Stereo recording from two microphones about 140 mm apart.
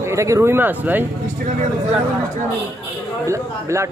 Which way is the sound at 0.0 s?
20° right (ahead or behind).